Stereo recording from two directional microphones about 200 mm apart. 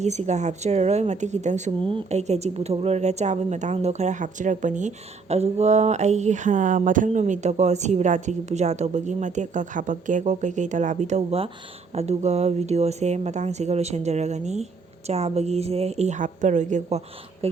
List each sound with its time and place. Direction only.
0.0 s speech: 35° right (ahead or behind)